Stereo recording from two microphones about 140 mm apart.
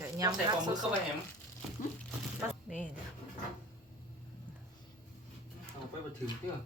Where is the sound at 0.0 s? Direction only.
25° right (ahead or behind).